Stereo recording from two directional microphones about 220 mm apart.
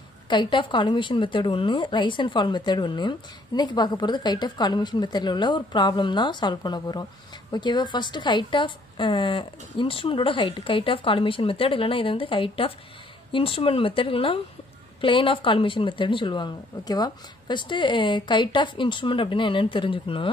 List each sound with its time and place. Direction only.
0.3 s a woman's voice: 20° left (ahead or behind)